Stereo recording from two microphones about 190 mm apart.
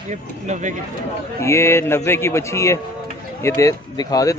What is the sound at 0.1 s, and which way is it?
Speech, 40° right (ahead or behind).